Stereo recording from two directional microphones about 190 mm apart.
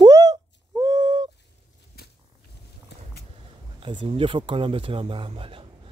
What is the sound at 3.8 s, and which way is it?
Speech, 25° right (ahead or behind).